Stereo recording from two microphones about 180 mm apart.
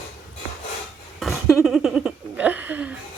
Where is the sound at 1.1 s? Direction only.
Centre (ahead or behind).